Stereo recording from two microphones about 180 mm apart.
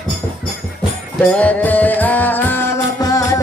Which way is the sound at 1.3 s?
10° left (ahead or behind).